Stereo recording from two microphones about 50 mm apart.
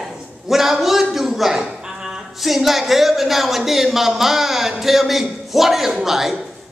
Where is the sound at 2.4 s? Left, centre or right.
Centre.